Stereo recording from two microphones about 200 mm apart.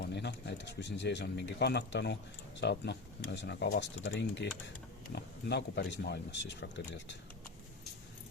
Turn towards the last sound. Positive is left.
turn(degrees=60)  # may be behind; listen again after turning